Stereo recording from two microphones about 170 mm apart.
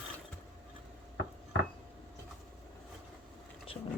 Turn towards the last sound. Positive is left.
turn(degrees=35)  # may be behind; listen again after turning